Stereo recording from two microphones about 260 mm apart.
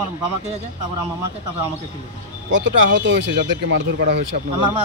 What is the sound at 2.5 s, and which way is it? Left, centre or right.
Speech, right.